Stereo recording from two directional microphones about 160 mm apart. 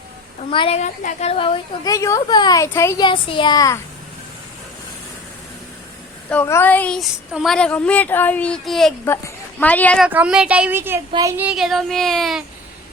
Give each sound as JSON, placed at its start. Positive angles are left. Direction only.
{"t": 0.5, "sound": "a woman's voice", "side_deg": 30}
{"t": 0.8, "sound": "a woman's voice", "side_deg": 45}
{"t": 1.9, "sound": "speech", "side_deg": 20}
{"t": 3.1, "sound": "speech", "side_deg": 30}
{"t": 6.3, "sound": "speech", "side_deg": 15}
{"t": 9.0, "sound": "speech", "side_deg": 15}
{"t": 10.1, "sound": "speech", "side_deg": -5}
{"t": 11.3, "sound": "speech", "side_deg": -5}